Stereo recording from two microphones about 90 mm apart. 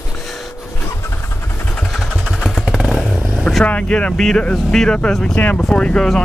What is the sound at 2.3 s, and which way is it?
Motorcycle, centre (ahead or behind).